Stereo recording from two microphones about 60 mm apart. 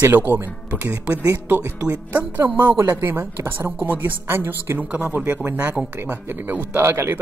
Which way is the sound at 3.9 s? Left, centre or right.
Right.